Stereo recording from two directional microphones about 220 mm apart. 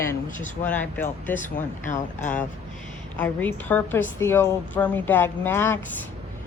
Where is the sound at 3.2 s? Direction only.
10° left (ahead or behind).